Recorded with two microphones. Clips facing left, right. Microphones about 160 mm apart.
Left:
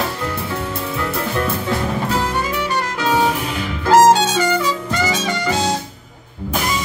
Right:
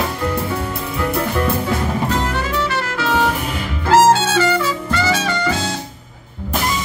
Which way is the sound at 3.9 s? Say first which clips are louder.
Left 1 dB; 15° left (ahead or behind).